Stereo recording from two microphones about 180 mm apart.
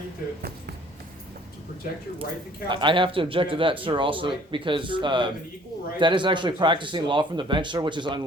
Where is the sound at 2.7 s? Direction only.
25° right (ahead or behind).